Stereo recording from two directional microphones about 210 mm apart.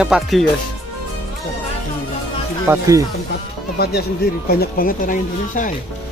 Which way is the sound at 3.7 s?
50° left (ahead or behind).